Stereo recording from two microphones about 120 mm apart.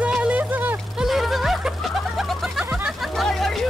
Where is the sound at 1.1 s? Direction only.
Centre (ahead or behind).